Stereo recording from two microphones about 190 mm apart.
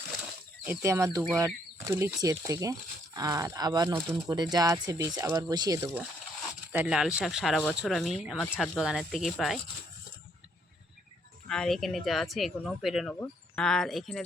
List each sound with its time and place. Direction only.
0.6 s speech: 15° right (ahead or behind)
6.7 s speech: 5° right (ahead or behind)
11.4 s speech: 5° left (ahead or behind)